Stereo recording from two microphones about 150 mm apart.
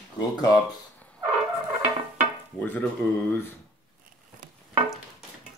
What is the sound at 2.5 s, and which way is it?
Speech, 10° left (ahead or behind).